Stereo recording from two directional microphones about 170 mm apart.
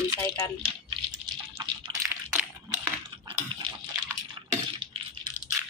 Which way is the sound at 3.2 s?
30° right (ahead or behind).